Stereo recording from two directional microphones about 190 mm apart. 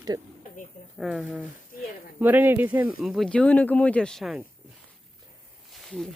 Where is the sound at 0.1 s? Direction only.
20° right (ahead or behind).